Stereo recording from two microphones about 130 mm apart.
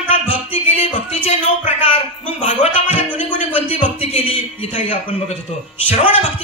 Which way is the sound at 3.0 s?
15° right (ahead or behind).